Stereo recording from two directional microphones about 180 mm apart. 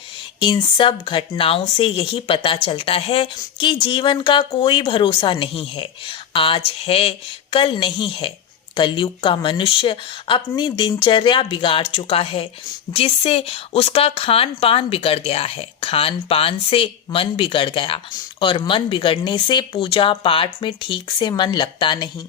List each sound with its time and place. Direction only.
0.3 s speech: 25° left (ahead or behind)